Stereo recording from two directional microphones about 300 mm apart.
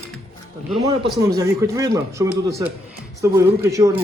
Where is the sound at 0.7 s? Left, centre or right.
Centre.